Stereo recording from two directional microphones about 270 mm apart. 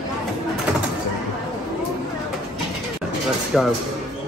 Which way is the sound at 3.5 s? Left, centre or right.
Centre.